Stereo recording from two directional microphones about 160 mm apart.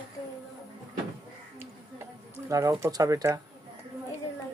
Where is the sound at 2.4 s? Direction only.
20° right (ahead or behind).